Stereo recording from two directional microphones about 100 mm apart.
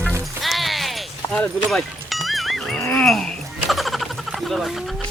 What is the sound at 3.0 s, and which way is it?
Speech, centre (ahead or behind).